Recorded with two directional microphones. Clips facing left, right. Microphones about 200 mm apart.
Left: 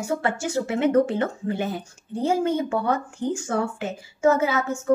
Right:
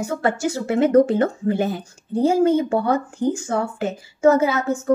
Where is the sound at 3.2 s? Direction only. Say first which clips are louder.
Right 3 dB; 40° right (ahead or behind).